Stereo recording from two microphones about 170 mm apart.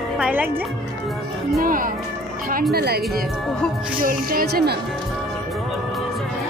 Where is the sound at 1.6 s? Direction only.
55° right (ahead or behind).